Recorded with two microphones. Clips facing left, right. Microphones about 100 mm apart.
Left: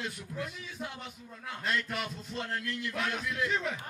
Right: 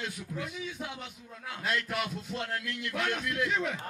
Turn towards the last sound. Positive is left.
turn(degrees=0)  # may be behind; listen again after turning